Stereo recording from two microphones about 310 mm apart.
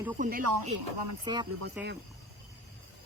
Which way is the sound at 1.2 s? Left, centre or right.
Centre.